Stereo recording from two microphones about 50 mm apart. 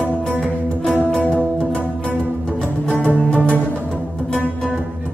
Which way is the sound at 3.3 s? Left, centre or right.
Left.